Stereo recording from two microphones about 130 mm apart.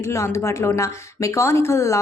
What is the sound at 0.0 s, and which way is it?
Speech, 20° left (ahead or behind).